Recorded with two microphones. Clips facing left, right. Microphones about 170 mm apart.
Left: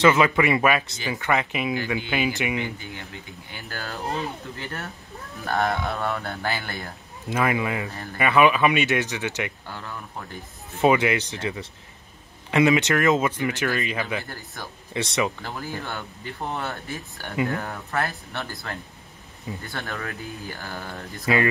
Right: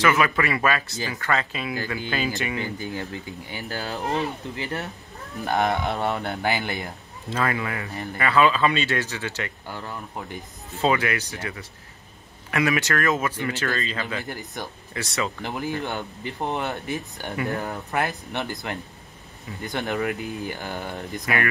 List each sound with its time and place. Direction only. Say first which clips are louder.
0.0 s speech: left 3 dB; 20° left (ahead or behind)
2.6 s speech: right 3 dB; 35° right (ahead or behind)
3.6 s speech: right 3 dB; 20° right (ahead or behind)
5.5 s speech: right 1 dB; 20° right (ahead or behind)
7.2 s speech: left 2 dB; 15° left (ahead or behind)
10.8 s speech: left 3 dB; 20° left (ahead or behind)
14.2 s speech: right 4 dB; 20° right (ahead or behind)
15.0 s speech: left 3 dB; 20° left (ahead or behind)
15.4 s speech: right 4 dB; 20° right (ahead or behind)